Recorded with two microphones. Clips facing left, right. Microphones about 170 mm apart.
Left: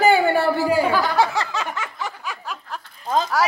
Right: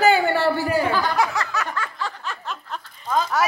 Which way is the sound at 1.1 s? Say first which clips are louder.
Left 2 dB; 25° left (ahead or behind).